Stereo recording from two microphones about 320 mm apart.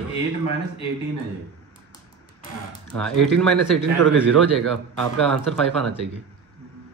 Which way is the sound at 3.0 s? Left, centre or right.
Centre.